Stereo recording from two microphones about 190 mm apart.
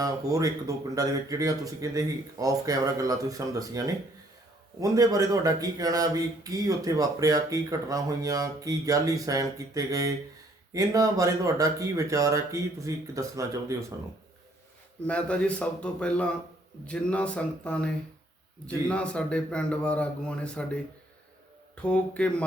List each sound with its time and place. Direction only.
0.0 s speech: 20° right (ahead or behind)
15.0 s a man's voice: 5° left (ahead or behind)
21.8 s a man's voice: 5° left (ahead or behind)